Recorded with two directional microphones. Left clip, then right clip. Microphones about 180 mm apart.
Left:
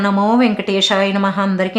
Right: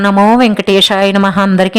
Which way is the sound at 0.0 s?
45° right (ahead or behind).